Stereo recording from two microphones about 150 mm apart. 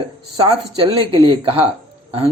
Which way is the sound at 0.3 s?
35° right (ahead or behind).